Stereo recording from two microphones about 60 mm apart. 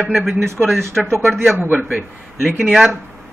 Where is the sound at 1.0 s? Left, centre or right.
Centre.